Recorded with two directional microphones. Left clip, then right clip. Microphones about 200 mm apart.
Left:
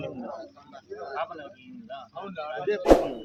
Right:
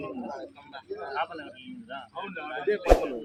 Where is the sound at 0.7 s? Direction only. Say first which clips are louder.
Right 2 dB; 50° left (ahead or behind).